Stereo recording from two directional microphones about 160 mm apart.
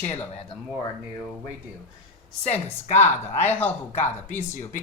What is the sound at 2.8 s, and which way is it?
Speech, 45° left (ahead or behind).